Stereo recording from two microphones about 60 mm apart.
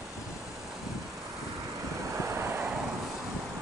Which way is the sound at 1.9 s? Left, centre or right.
Right.